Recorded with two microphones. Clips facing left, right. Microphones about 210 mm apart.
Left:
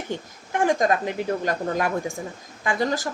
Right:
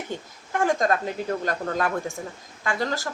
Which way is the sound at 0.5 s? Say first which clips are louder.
Left 2 dB; 15° left (ahead or behind).